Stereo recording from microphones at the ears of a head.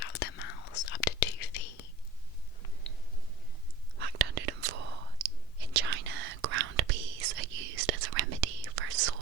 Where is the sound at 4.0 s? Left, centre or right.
Right.